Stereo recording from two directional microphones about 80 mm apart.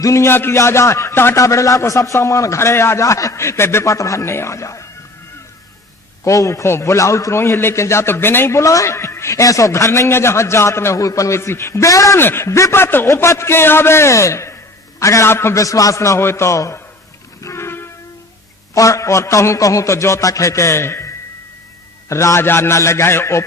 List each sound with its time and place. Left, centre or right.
0.0 s a man's voice: left
6.2 s a man's voice: left
12.2 s a man's voice: left
17.4 s music: left
18.7 s a man's voice: left
22.1 s a man's voice: left